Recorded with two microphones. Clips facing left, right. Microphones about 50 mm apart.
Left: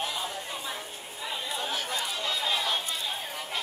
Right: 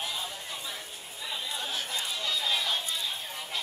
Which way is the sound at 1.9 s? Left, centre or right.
Left.